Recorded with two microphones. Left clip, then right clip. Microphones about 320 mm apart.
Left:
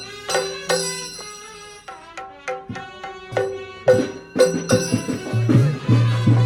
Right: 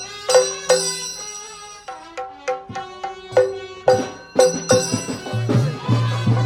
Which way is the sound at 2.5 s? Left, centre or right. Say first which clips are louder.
Right 4 dB; centre.